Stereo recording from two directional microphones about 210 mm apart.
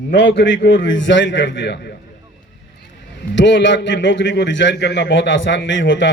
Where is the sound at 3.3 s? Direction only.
60° left (ahead or behind).